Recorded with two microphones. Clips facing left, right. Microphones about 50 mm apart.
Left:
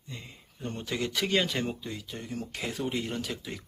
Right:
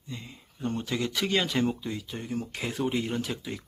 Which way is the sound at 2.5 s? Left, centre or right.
Centre.